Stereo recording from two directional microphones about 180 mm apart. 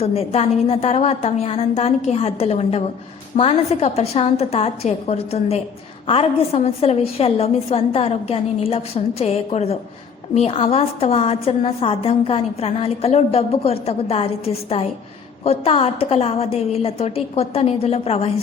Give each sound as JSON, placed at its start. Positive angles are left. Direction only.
{"t": 0.0, "sound": "a woman's voice", "side_deg": 35}